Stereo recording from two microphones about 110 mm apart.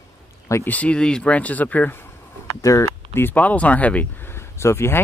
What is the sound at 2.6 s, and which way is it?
Speech, 30° left (ahead or behind).